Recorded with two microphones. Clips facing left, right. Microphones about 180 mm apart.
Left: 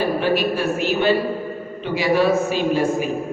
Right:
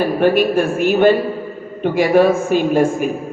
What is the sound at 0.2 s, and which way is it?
A man's voice, 50° right (ahead or behind).